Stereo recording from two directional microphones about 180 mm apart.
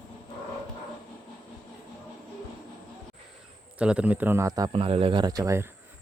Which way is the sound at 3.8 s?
5° right (ahead or behind).